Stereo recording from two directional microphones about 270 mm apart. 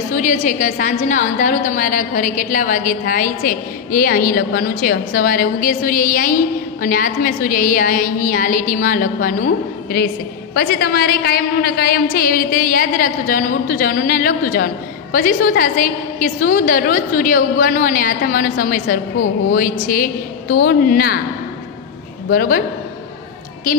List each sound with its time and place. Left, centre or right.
0.1 s a woman's voice: left
22.3 s a woman's voice: left